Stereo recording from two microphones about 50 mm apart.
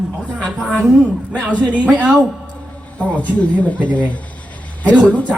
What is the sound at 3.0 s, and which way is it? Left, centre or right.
Speech, left.